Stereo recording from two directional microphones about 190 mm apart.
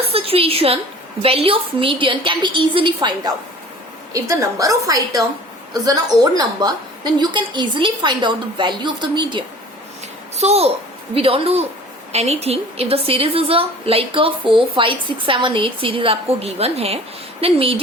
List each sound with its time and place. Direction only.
0.0 s a woman's voice: 30° right (ahead or behind)